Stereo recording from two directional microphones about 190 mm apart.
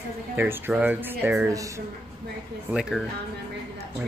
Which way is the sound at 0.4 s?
10° right (ahead or behind).